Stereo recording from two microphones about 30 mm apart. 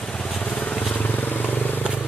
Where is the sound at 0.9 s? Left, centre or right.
Left.